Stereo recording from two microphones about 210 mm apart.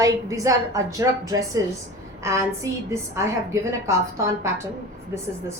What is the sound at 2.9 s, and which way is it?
A woman's voice, 15° right (ahead or behind).